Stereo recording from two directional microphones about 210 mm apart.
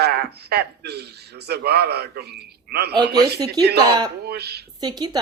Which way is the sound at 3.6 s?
20° right (ahead or behind).